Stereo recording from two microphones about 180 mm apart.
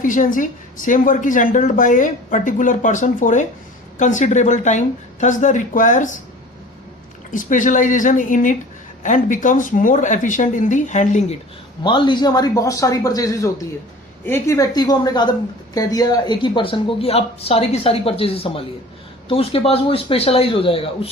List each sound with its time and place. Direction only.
0.0 s a woman's voice: 45° left (ahead or behind)
7.3 s a woman's voice: 45° left (ahead or behind)
11.8 s a woman's voice: 25° left (ahead or behind)